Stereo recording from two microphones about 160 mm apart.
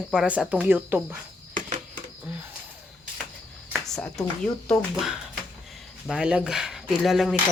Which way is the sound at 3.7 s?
Centre (ahead or behind).